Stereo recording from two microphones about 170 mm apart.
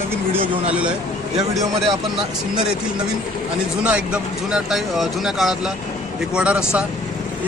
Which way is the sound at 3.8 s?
5° right (ahead or behind).